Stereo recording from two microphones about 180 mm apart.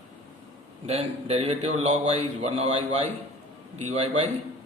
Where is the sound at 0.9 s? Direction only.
35° right (ahead or behind).